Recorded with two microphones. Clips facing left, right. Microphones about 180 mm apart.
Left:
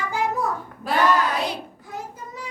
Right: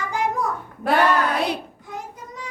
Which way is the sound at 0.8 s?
60° right (ahead or behind).